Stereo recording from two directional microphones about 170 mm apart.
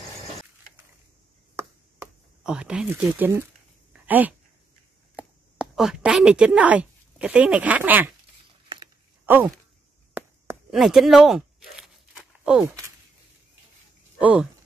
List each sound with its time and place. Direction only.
2.4 s speech: 5° right (ahead or behind)
3.9 s a sound: 10° right (ahead or behind)
5.1 s a woman's voice: 5° right (ahead or behind)
9.2 s a sound: 10° right (ahead or behind)
10.1 s chop: 15° right (ahead or behind)
10.7 s tearing: centre (ahead or behind)
12.6 s speech: 15° right (ahead or behind)
14.2 s speech: 5° right (ahead or behind)